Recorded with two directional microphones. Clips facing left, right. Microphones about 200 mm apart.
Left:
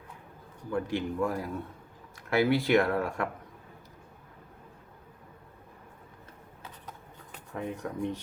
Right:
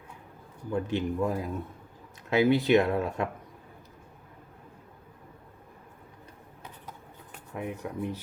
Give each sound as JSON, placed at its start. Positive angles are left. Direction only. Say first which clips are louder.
{"t": 0.7, "sound": "speech", "louder": "right 2 dB", "side_deg": -20}
{"t": 7.5, "sound": "speech", "louder": "even", "side_deg": -10}